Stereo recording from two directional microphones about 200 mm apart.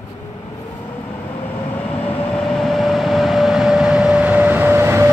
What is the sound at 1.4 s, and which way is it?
Vehicle, 10° left (ahead or behind).